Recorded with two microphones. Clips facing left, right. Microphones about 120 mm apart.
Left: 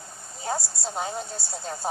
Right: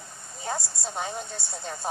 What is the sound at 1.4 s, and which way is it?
Speech, 30° left (ahead or behind).